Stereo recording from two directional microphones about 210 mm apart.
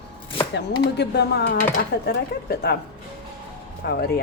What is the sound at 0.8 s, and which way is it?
Speech, 50° left (ahead or behind).